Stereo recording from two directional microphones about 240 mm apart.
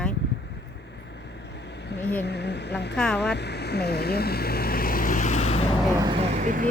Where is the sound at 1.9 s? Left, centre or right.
Left.